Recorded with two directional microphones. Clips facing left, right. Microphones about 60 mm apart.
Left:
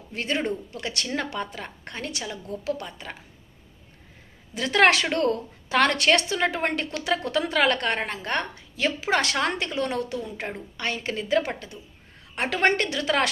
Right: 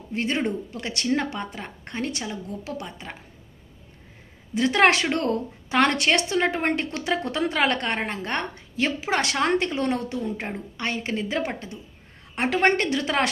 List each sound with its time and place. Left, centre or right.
0.1 s a woman's voice: right
4.5 s a woman's voice: right